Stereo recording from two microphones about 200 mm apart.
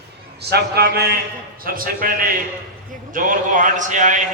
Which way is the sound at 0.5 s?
50° right (ahead or behind).